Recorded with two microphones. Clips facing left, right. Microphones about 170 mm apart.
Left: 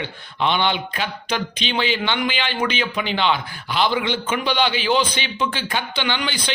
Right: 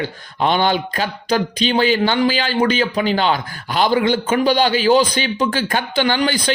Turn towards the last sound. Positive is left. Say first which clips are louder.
# right 7 dB
turn(degrees=-45)  # may be behind; listen again after turning